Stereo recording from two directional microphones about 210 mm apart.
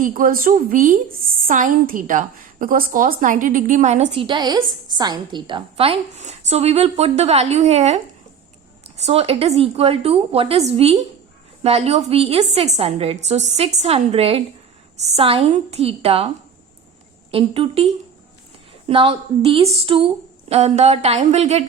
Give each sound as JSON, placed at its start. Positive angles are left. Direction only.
{"t": 0.0, "sound": "a woman's voice", "side_deg": -40}
{"t": 17.3, "sound": "a woman's voice", "side_deg": -25}
{"t": 18.9, "sound": "a woman's voice", "side_deg": -25}